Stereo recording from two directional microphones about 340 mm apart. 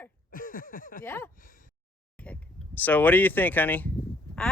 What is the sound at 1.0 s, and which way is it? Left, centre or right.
Speech, centre.